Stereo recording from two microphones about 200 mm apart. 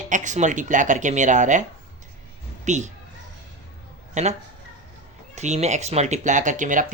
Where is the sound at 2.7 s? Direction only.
35° right (ahead or behind).